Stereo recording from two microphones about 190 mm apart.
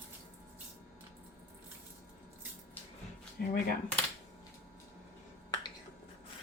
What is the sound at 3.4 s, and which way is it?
Speech, 55° left (ahead or behind).